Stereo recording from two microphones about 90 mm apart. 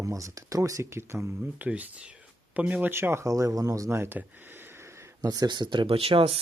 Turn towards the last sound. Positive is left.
turn(degrees=-90)